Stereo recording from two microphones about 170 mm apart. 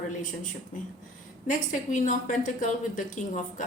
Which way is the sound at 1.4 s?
45° left (ahead or behind).